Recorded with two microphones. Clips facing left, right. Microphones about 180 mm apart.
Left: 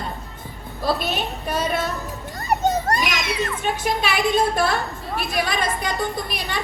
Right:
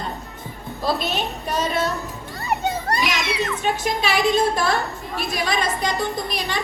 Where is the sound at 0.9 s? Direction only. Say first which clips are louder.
Right 1 dB; 50° left (ahead or behind).